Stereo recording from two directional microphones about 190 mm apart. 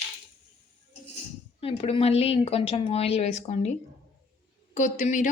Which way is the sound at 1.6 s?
30° left (ahead or behind).